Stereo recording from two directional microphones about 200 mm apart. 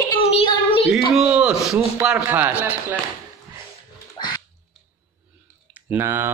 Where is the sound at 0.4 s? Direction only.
30° left (ahead or behind).